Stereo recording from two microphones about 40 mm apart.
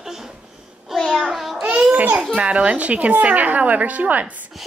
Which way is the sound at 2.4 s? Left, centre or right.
Right.